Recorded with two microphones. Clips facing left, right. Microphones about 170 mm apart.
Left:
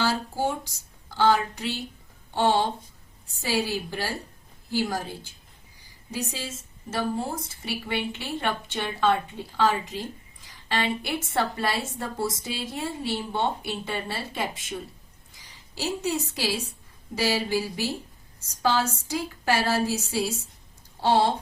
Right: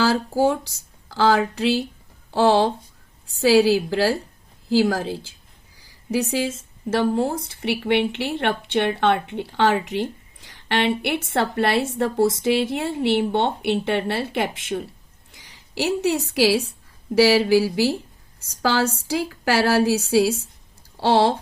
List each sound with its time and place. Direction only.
0.0 s a sound: 90° right
1.1 s speech: 90° right
6.9 s a woman's voice: 70° right (ahead or behind); by 21.3 s 90° right